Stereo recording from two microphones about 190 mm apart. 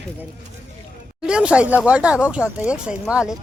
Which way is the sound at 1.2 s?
5° right (ahead or behind).